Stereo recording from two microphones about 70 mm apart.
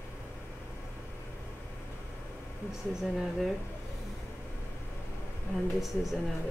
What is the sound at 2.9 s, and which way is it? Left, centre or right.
Speech, centre.